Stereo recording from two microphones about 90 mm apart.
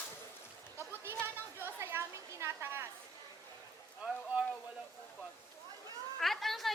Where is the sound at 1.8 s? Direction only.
30° right (ahead or behind).